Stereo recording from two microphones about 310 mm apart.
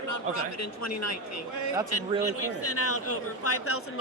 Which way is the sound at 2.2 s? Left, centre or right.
Left.